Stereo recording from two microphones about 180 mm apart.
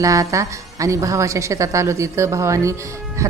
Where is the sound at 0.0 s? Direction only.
15° right (ahead or behind).